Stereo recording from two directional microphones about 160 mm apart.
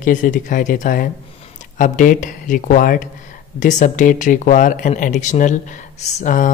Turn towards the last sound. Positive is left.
turn(degrees=50)  # may be behind; listen again after turning